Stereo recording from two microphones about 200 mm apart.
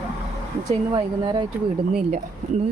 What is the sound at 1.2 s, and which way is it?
Speech, 20° right (ahead or behind).